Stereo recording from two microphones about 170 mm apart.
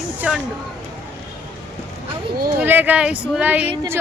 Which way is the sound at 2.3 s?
60° right (ahead or behind).